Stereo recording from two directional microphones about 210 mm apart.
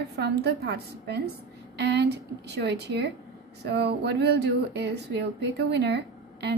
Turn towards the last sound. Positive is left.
turn(degrees=-55)  # may be behind; listen again after turning